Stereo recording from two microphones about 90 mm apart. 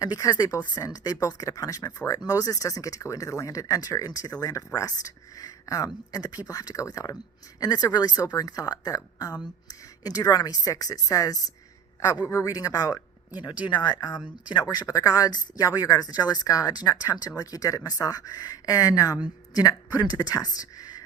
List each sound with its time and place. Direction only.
0.0 s speech: 45° left (ahead or behind)
13.7 s speech: 55° left (ahead or behind)